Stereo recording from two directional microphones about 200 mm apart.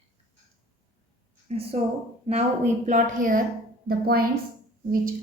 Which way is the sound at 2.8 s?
40° right (ahead or behind).